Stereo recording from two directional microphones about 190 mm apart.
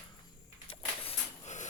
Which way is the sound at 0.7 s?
30° left (ahead or behind).